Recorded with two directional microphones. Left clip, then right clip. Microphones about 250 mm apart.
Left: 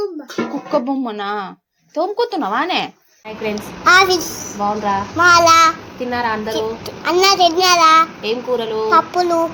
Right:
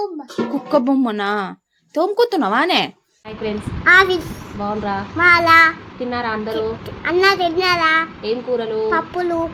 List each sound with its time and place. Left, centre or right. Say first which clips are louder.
0.7 s speech: right 3 dB; right
3.4 s a child's voice: left 1 dB; centre